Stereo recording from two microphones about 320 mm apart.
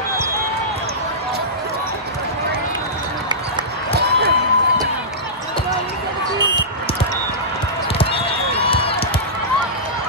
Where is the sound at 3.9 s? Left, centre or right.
Right.